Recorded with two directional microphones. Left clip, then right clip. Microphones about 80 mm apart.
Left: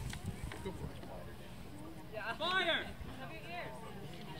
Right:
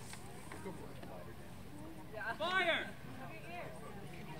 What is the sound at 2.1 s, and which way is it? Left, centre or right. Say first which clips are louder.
Speech: left 1 dB; left.